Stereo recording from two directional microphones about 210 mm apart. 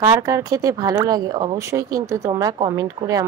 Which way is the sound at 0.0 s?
15° right (ahead or behind).